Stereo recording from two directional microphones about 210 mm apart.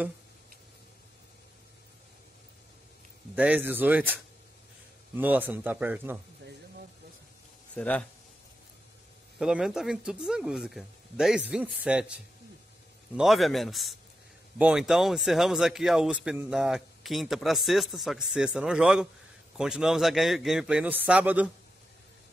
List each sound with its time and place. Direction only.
3.3 s a man's voice: 5° right (ahead or behind)
7.7 s a man's voice: 5° left (ahead or behind)
9.4 s a man's voice: 5° right (ahead or behind)